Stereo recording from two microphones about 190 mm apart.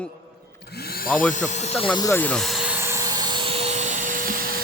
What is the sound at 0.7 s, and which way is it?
Speech, 55° left (ahead or behind).